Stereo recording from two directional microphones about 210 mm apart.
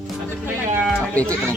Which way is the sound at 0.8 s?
5° left (ahead or behind).